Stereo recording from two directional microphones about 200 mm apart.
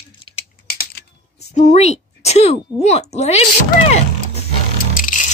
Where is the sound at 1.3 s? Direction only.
35° left (ahead or behind).